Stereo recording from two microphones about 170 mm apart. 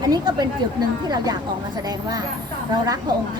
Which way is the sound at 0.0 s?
25° right (ahead or behind).